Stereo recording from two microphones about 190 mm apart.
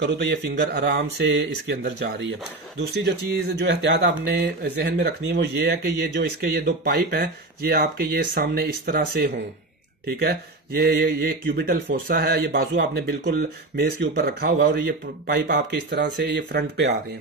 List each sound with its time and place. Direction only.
0.0 s speech: 60° right (ahead or behind)